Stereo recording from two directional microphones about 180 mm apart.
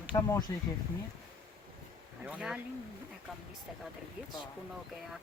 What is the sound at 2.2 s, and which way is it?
Speech, 5° right (ahead or behind).